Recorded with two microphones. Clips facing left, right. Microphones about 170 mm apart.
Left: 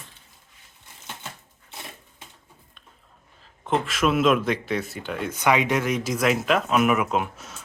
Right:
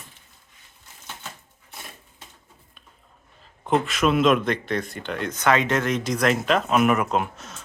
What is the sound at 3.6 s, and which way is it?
Speech, centre (ahead or behind).